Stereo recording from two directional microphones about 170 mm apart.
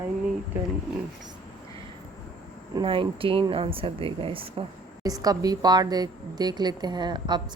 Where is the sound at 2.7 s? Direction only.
30° right (ahead or behind).